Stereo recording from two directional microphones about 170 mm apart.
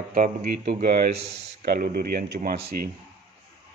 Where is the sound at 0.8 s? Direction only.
60° right (ahead or behind).